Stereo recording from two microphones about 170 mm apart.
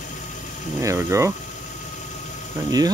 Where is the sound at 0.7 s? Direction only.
15° right (ahead or behind).